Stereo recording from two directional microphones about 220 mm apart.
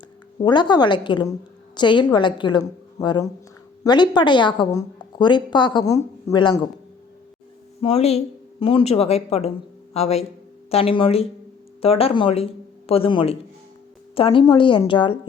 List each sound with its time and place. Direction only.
0.3 s a woman's voice: 20° left (ahead or behind)
7.8 s a woman's voice: 25° left (ahead or behind)